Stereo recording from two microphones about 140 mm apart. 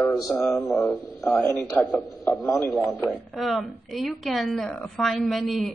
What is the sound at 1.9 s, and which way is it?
Speech, 20° left (ahead or behind).